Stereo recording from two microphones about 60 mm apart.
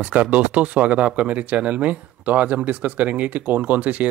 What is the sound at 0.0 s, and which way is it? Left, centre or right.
Speech, right.